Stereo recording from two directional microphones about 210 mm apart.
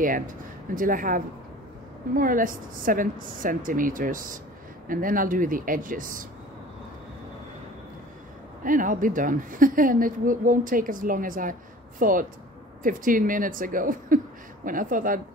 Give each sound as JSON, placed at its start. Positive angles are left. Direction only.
{"t": 0.7, "sound": "a woman's voice", "side_deg": -40}
{"t": 8.6, "sound": "a woman's voice", "side_deg": -40}